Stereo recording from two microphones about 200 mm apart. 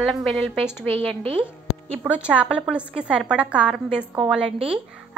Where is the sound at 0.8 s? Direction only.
25° right (ahead or behind).